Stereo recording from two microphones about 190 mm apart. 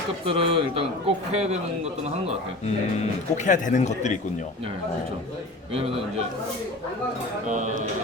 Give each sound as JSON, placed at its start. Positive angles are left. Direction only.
{"t": 0.3, "sound": "a man's voice", "side_deg": -30}
{"t": 3.3, "sound": "speech", "side_deg": 40}
{"t": 7.5, "sound": "a man's voice", "side_deg": -40}